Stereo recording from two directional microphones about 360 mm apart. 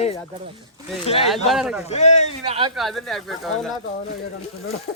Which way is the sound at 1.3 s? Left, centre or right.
Centre.